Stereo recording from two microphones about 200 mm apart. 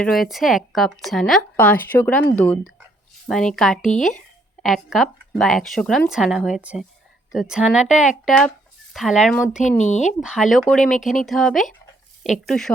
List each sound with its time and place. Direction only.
0.0 s a woman's voice: centre (ahead or behind)
9.6 s speech: 35° left (ahead or behind)
10.1 s a woman's voice: 5° right (ahead or behind)